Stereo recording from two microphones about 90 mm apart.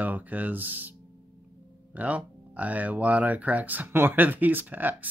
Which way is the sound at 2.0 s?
15° right (ahead or behind).